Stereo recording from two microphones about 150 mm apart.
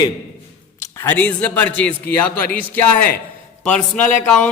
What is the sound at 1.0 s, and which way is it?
Speech, 10° left (ahead or behind).